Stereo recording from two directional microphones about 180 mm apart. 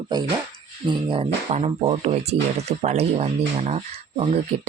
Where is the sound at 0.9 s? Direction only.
25° right (ahead or behind).